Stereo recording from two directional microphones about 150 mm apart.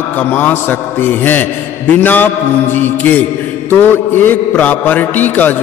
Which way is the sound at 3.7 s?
15° left (ahead or behind).